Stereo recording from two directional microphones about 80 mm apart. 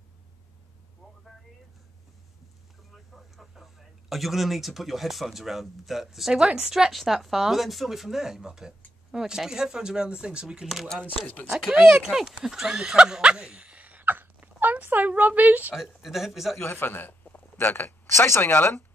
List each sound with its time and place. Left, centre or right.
3.3 s speech: centre; by 15.7 s right
15.7 s speech: centre
16.5 s a man's voice: left